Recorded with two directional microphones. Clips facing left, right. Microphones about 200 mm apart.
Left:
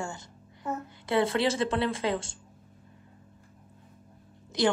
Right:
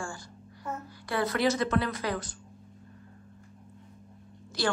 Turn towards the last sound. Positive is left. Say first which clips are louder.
# left 4 dB
turn(degrees=20)  # may be behind; listen again after turning